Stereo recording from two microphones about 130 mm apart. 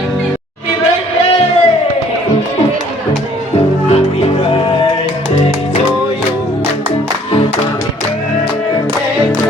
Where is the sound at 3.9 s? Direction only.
50° left (ahead or behind).